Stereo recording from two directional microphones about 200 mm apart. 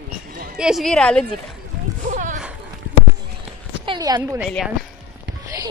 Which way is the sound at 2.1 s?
40° right (ahead or behind).